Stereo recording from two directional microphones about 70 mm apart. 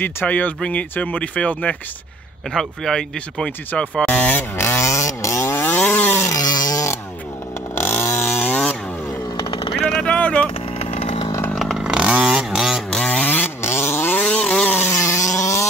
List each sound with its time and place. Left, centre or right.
0.0 s speech: left
2.5 s speech: centre; by 4.5 s left
4.6 s chainsaw: left
5.8 s chainsaw: left
6.3 s a sound: left
7.7 s chainsaw: left
9.8 s vehicle: centre
11.5 s vehicle: centre
11.8 s vehicle: centre
12.9 s a sound: centre
13.6 s vehicle: left
14.2 s vehicle: centre
14.9 s a sound: left